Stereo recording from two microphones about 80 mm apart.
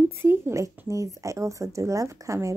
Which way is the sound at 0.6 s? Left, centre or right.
Right.